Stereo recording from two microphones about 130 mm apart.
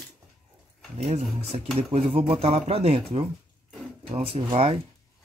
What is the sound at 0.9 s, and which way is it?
Speech, 60° right (ahead or behind).